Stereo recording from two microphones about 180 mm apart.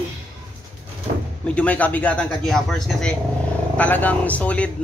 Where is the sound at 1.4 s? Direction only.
5° left (ahead or behind).